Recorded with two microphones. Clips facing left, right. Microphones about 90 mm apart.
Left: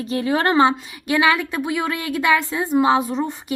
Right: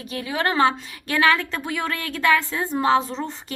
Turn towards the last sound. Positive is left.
turn(degrees=15)  # may be behind; listen again after turning